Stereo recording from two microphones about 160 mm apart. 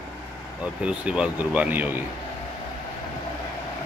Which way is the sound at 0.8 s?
5° right (ahead or behind).